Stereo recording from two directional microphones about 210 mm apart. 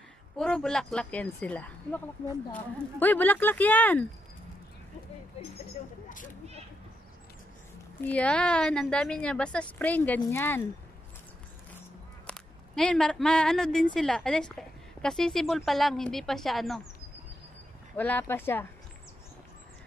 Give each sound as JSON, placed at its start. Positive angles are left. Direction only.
{"t": 0.4, "sound": "a woman's voice", "side_deg": 5}
{"t": 6.0, "sound": "speech", "side_deg": 40}
{"t": 8.0, "sound": "a woman's voice", "side_deg": 5}
{"t": 12.3, "sound": "a woman's voice", "side_deg": 5}
{"t": 17.9, "sound": "speech", "side_deg": 10}